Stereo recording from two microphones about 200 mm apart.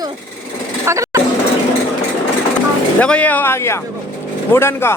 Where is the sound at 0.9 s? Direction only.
15° right (ahead or behind).